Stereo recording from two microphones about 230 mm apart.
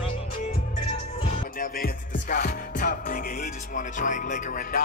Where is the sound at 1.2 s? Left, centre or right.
Left.